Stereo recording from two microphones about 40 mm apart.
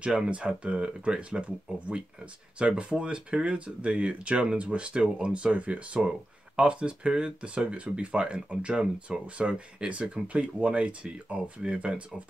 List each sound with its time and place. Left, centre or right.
0.0 s speech: right